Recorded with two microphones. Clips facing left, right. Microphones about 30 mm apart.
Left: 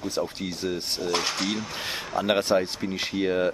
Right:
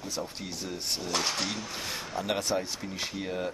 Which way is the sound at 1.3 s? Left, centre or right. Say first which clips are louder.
Left 4 dB; centre.